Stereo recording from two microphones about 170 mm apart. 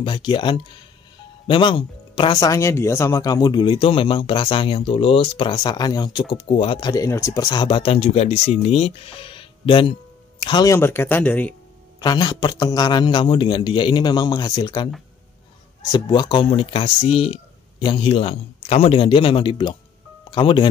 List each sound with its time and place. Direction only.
0.0 s speech: 30° left (ahead or behind)
6.3 s speech: 35° left (ahead or behind); by 11.5 s 10° left (ahead or behind)
12.0 s speech: 25° left (ahead or behind)
15.9 s speech: 25° left (ahead or behind)